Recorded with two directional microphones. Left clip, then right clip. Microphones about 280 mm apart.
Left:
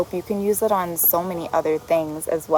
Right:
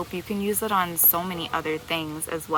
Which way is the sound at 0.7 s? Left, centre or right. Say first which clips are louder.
Left 3 dB; right.